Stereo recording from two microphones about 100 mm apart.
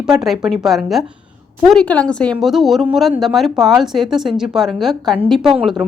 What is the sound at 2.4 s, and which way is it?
Speech, centre (ahead or behind).